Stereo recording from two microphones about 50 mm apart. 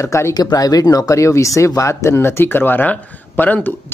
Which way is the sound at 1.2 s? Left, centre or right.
Left.